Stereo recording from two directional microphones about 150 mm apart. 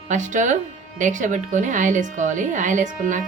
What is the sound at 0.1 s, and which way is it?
Speech, 55° right (ahead or behind).